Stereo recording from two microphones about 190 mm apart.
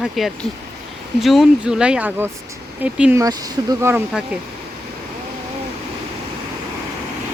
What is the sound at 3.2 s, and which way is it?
Speech, 20° right (ahead or behind).